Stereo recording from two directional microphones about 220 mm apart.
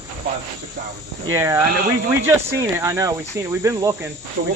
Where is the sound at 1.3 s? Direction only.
10° right (ahead or behind).